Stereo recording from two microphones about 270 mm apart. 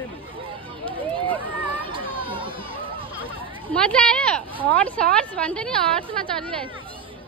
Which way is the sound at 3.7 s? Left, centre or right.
Centre.